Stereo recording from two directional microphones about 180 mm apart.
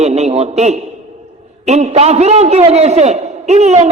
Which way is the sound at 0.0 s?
35° right (ahead or behind).